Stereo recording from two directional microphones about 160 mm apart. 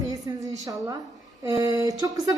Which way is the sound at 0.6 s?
20° right (ahead or behind).